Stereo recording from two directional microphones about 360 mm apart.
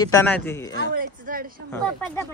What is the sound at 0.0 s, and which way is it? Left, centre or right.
Speech, centre.